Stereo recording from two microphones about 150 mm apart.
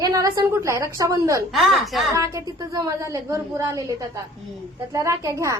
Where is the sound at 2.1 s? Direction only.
20° right (ahead or behind).